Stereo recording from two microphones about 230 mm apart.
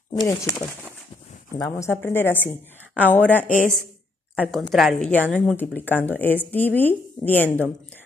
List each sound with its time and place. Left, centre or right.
0.2 s speech: centre